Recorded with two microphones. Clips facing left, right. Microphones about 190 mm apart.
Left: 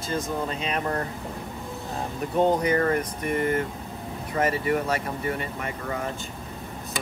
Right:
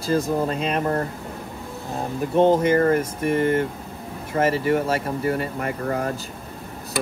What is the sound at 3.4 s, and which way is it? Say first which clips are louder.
Speech: right 3 dB; 30° right (ahead or behind).